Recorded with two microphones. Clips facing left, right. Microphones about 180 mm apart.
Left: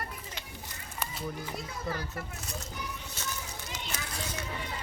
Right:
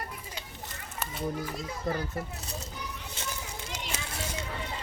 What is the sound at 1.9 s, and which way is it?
Speech, 25° right (ahead or behind).